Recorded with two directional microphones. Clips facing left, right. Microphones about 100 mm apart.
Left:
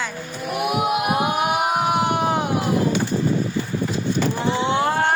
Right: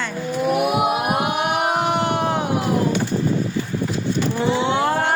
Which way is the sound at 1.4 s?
5° left (ahead or behind).